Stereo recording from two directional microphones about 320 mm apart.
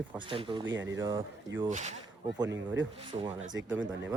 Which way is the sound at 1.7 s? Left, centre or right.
Right.